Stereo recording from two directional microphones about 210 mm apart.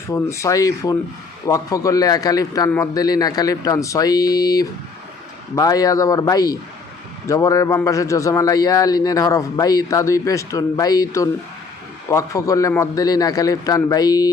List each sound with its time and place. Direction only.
0.1 s a man's voice: 15° left (ahead or behind)